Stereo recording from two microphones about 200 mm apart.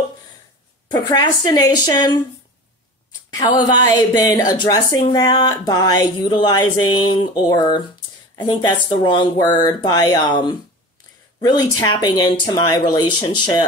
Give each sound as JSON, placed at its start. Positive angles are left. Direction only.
{"t": 0.8, "sound": "a woman's voice", "side_deg": 20}
{"t": 3.3, "sound": "a woman's voice", "side_deg": 20}